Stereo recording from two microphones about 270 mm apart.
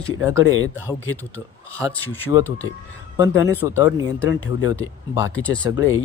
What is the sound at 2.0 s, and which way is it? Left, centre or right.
Speech, centre.